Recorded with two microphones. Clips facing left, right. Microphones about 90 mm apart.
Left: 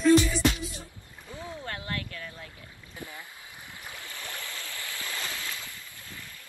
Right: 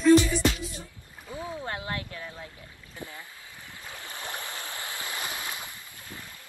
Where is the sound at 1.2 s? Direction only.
20° right (ahead or behind).